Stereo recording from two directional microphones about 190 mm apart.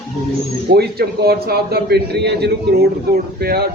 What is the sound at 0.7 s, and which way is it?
A man's voice, 55° right (ahead or behind).